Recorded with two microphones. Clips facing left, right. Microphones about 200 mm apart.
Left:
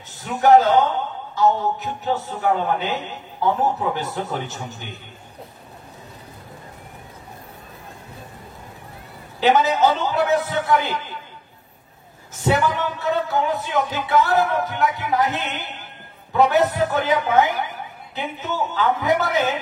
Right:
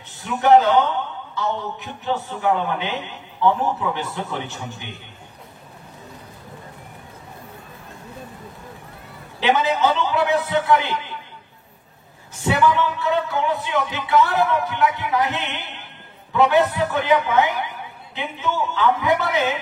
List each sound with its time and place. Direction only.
0.2 s a man's voice: 40° left (ahead or behind)
9.4 s a man's voice: 40° left (ahead or behind)
12.4 s a man's voice: 40° left (ahead or behind)